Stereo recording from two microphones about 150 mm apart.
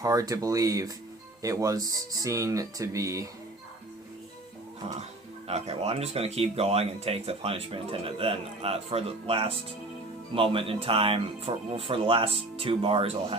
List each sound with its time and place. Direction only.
0.0 s speech: 25° right (ahead or behind)
5.5 s speech: 45° right (ahead or behind)